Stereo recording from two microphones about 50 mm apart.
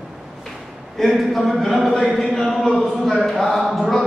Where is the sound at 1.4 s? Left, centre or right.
Centre.